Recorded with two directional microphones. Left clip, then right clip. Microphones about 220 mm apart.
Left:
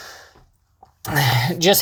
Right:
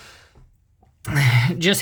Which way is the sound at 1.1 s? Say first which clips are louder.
Left 2 dB; 25° right (ahead or behind).